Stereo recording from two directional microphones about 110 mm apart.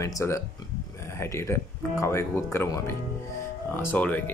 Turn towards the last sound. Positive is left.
turn(degrees=15)  # may be behind; listen again after turning